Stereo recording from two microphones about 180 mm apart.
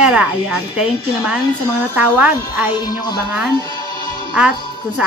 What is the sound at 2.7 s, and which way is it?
Speech, 25° left (ahead or behind).